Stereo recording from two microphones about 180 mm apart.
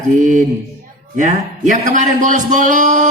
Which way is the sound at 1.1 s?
45° right (ahead or behind).